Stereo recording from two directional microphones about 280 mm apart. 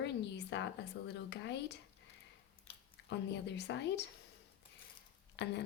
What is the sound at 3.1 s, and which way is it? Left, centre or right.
Speech, left.